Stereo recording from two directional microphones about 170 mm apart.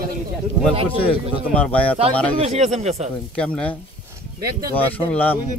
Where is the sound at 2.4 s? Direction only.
40° right (ahead or behind).